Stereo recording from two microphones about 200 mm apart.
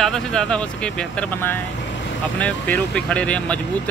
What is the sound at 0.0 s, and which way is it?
Speech, 5° left (ahead or behind).